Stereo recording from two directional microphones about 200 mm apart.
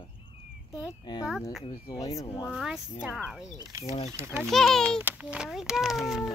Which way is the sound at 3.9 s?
35° left (ahead or behind).